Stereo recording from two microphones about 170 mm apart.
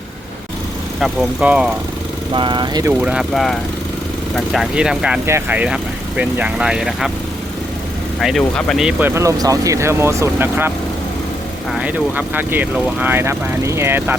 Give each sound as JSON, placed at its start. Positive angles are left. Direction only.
{"t": 1.0, "sound": "speech", "side_deg": -5}
{"t": 2.3, "sound": "speech", "side_deg": -30}
{"t": 2.8, "sound": "speech", "side_deg": -5}
{"t": 8.2, "sound": "speech", "side_deg": 0}
{"t": 11.7, "sound": "speech", "side_deg": -10}